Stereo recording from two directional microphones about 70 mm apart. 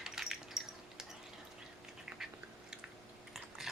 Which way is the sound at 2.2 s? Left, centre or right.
Centre.